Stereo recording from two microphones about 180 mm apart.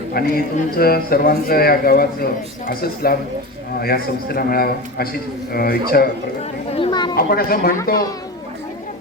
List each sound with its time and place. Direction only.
0.1 s a man's voice: 55° left (ahead or behind)
6.7 s a woman's voice: 30° left (ahead or behind)
7.2 s a man's voice: 55° left (ahead or behind)